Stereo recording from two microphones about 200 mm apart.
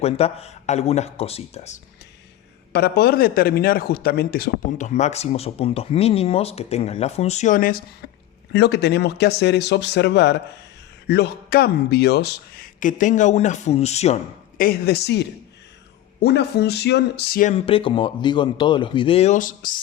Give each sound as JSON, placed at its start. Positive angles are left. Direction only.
{"t": 0.0, "sound": "a man's voice", "side_deg": 30}
{"t": 2.7, "sound": "a man's voice", "side_deg": 50}
{"t": 14.6, "sound": "speech", "side_deg": 50}
{"t": 17.5, "sound": "speech", "side_deg": 25}